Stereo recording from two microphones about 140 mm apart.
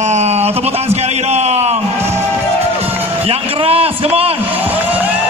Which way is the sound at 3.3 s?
45° right (ahead or behind).